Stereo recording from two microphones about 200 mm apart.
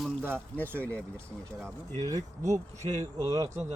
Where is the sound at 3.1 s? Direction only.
15° right (ahead or behind).